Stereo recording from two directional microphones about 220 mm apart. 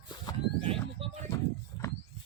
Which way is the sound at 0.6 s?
25° right (ahead or behind).